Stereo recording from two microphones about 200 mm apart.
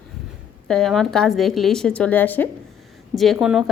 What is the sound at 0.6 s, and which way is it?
A woman's voice, centre (ahead or behind).